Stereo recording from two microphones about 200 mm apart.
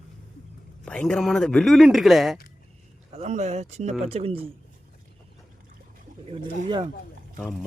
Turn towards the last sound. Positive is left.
turn(degrees=0)  # may be behind; listen again after turning